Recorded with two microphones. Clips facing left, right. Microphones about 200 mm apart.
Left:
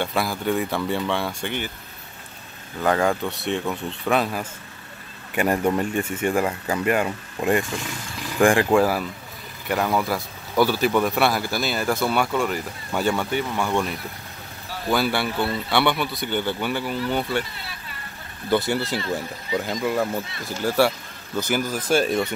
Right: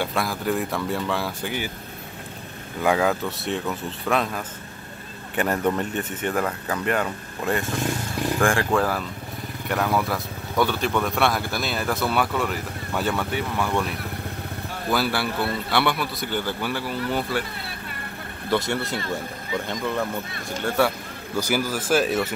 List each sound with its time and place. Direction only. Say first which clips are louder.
0.0 s speech: left 1 dB; centre (ahead or behind)
2.8 s speech: even; 5° right (ahead or behind); by 9.0 s 10° left (ahead or behind)
9.7 s speech: left 1 dB; centre (ahead or behind)
14.9 s speech: left 2 dB; centre (ahead or behind)
18.5 s speech: left 2 dB; centre (ahead or behind)